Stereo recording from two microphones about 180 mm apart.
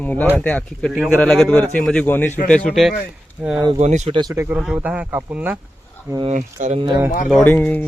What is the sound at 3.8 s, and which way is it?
Speech, 40° right (ahead or behind).